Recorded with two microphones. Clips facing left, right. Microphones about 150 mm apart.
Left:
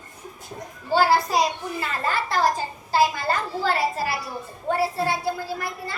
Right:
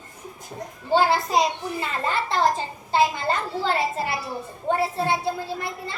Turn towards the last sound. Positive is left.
turn(degrees=-25)  # may be behind; listen again after turning